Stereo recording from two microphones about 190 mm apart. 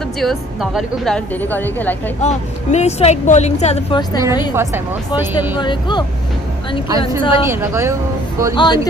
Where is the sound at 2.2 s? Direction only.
35° left (ahead or behind).